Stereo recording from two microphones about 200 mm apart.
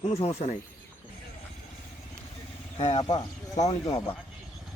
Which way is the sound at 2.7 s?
30° left (ahead or behind).